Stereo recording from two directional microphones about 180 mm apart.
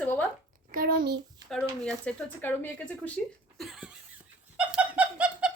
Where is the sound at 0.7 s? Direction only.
55° right (ahead or behind).